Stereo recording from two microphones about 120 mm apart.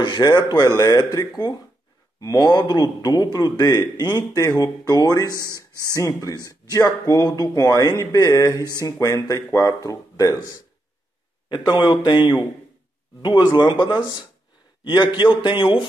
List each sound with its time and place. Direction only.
0.0 s a man's voice: 35° left (ahead or behind)
11.4 s a man's voice: 40° left (ahead or behind)
13.2 s a man's voice: 40° left (ahead or behind)